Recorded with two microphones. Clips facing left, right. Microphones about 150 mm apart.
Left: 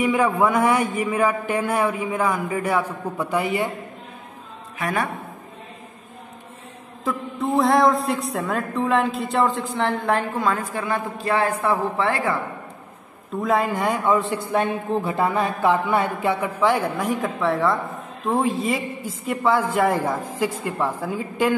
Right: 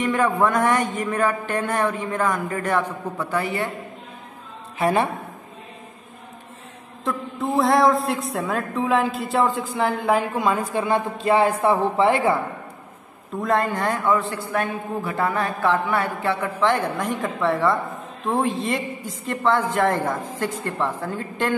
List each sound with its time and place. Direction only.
0.0 s a man's voice: 10° left (ahead or behind)
4.7 s a man's voice: 30° right (ahead or behind)
7.1 s music: centre (ahead or behind); by 11.7 s 20° right (ahead or behind)
11.7 s a woman's voice: 20° right (ahead or behind)
13.3 s a man's voice: centre (ahead or behind)